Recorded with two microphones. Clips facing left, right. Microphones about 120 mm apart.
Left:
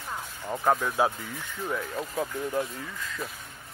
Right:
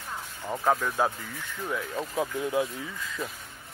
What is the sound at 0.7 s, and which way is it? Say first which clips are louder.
Speech: left 1 dB; 5° left (ahead or behind).